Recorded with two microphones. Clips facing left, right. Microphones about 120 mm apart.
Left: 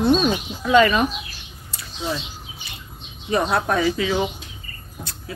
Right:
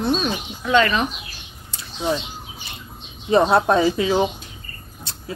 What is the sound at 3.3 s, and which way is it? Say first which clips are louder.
Speech: right 5 dB; 25° right (ahead or behind).